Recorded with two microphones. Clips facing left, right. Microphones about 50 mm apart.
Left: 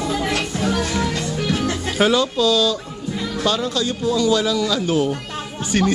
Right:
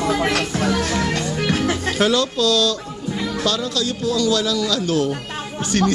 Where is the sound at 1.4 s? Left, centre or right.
Right.